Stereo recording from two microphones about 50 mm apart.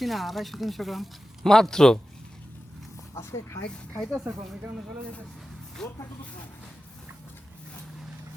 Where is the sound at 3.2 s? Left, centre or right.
Left.